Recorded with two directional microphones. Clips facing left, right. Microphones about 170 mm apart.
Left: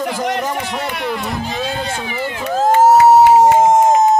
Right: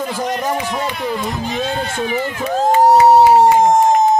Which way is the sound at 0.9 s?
75° left (ahead or behind).